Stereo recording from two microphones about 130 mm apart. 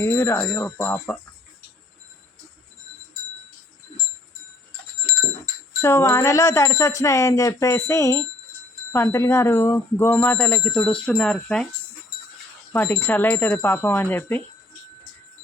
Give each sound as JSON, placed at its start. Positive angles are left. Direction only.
{"t": 0.0, "sound": "speech", "side_deg": 20}
{"t": 5.8, "sound": "speech", "side_deg": 20}
{"t": 12.7, "sound": "speech", "side_deg": 15}